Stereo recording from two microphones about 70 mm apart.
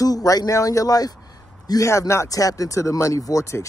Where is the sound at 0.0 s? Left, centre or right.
Left.